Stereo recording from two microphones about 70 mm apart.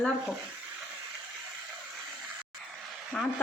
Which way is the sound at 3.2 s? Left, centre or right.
Centre.